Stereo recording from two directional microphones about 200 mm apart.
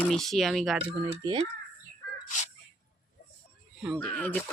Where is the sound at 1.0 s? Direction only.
25° right (ahead or behind).